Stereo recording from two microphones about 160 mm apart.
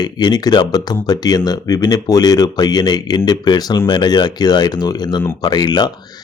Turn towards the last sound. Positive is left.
turn(degrees=25)  # may be behind; listen again after turning